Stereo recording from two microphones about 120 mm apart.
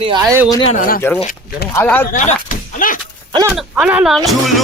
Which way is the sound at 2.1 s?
80° left.